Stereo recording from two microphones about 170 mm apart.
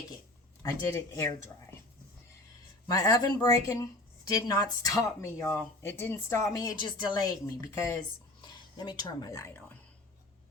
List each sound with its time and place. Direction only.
0.6 s speech: 20° left (ahead or behind)
2.8 s speech: 20° left (ahead or behind)